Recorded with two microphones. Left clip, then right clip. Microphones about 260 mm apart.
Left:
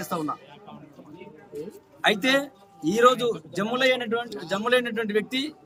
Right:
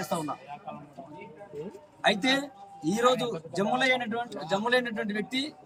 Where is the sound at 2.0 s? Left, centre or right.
Centre.